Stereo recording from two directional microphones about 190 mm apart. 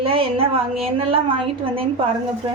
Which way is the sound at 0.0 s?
30° right (ahead or behind).